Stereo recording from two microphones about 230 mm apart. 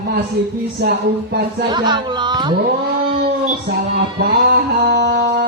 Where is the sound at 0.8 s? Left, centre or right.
Right.